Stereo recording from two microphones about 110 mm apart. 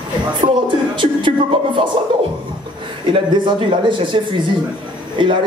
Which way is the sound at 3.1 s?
45° right (ahead or behind).